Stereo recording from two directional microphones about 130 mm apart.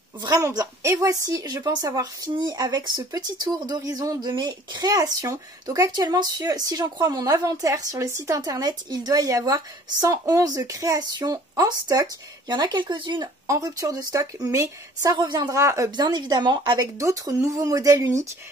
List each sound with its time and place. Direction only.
0.2 s a woman's voice: 30° right (ahead or behind)
17.0 s a woman's voice: 25° right (ahead or behind)